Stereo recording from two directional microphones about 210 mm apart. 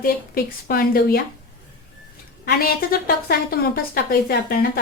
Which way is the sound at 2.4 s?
45° left (ahead or behind).